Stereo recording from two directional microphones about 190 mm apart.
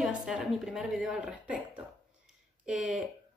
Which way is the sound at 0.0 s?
5° right (ahead or behind).